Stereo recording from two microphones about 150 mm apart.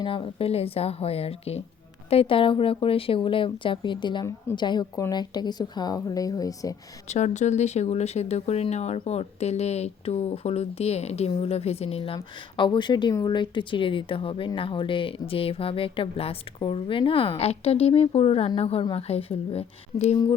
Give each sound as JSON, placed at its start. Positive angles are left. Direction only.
{"t": 0.0, "sound": "a woman's voice", "side_deg": 35}
{"t": 7.1, "sound": "speech", "side_deg": 50}